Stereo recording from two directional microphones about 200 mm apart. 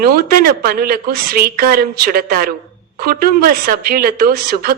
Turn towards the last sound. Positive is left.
turn(degrees=-45)  # may be behind; listen again after turning